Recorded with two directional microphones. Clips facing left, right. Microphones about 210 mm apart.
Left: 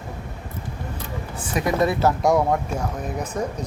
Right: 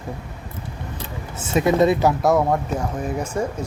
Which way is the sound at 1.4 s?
25° right (ahead or behind).